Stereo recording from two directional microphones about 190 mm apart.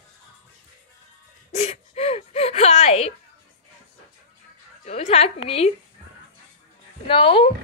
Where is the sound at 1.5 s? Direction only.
35° left (ahead or behind).